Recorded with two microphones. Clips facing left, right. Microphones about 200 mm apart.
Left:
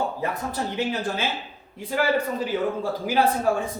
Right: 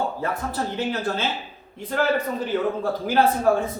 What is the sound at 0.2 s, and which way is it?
Speech, 15° left (ahead or behind).